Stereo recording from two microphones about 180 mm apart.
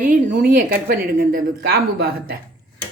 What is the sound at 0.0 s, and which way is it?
A woman's voice, 45° right (ahead or behind).